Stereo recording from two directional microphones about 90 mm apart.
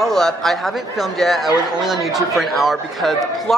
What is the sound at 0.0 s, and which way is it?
A man's voice, 5° left (ahead or behind).